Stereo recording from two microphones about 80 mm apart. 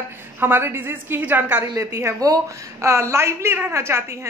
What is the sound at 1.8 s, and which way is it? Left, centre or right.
A woman's voice, right.